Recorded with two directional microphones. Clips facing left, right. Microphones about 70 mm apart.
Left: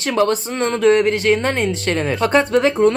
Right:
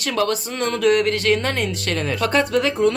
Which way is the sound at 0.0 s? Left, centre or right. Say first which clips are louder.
Left 4 dB; left.